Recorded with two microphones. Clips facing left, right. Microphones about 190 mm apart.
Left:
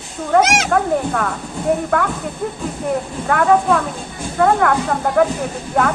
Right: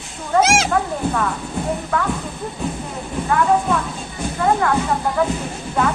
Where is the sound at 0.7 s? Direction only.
55° left (ahead or behind).